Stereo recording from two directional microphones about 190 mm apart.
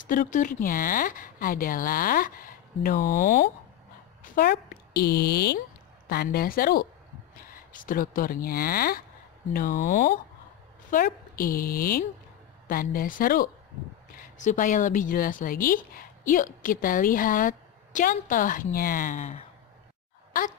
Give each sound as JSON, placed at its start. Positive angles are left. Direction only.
{"t": 0.0, "sound": "a woman's voice", "side_deg": 45}